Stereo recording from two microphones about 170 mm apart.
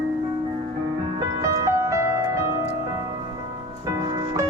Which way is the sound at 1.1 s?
15° right (ahead or behind).